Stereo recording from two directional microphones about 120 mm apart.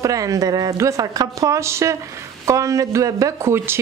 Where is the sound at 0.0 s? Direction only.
30° right (ahead or behind).